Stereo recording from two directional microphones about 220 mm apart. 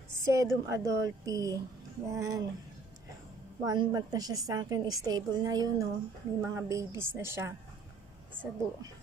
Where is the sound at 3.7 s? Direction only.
15° right (ahead or behind).